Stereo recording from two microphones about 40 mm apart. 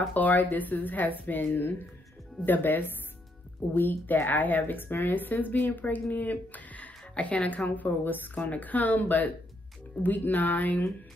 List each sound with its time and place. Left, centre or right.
0.1 s a woman's voice: left
1.4 s a woman's voice: left
8.4 s a woman's voice: left